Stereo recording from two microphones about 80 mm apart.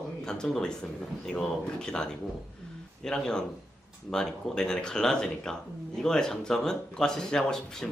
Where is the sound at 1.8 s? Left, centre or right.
Centre.